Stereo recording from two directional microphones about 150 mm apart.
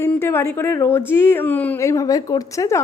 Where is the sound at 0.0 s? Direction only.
15° left (ahead or behind).